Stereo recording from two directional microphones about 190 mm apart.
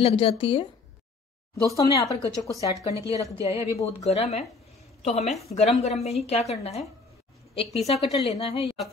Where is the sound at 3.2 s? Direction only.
15° right (ahead or behind).